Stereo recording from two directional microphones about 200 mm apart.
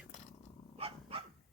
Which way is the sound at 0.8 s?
25° right (ahead or behind).